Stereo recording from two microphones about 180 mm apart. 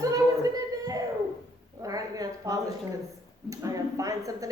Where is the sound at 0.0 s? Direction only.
20° right (ahead or behind).